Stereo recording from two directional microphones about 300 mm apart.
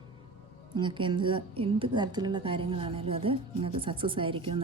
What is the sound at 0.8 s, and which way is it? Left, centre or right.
A woman's voice, centre.